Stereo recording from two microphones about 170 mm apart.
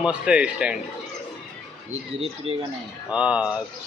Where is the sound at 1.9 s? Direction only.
35° right (ahead or behind).